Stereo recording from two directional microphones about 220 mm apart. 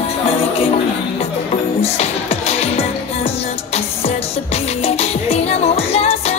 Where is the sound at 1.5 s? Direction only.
30° left (ahead or behind).